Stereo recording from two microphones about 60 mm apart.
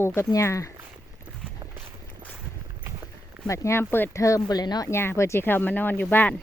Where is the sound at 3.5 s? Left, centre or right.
Left.